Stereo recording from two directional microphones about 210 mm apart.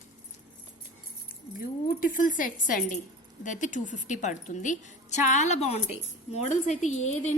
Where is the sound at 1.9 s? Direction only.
40° left (ahead or behind).